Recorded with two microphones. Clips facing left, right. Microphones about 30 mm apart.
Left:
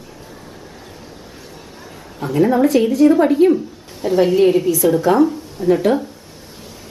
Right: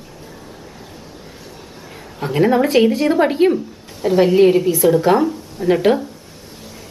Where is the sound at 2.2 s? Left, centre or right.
Right.